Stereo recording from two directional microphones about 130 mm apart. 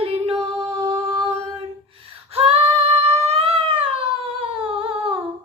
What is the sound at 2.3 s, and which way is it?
Female singing, 45° right (ahead or behind).